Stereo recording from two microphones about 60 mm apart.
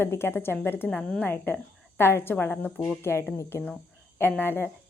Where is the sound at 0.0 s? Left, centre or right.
Left.